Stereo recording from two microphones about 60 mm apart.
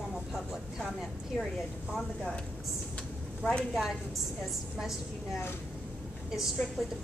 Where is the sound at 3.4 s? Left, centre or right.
Centre.